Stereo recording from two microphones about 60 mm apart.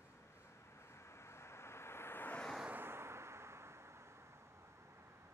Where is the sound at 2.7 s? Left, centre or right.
Right.